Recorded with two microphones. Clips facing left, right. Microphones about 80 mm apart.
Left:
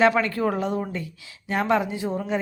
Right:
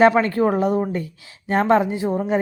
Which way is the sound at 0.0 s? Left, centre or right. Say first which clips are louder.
Right 5 dB; right.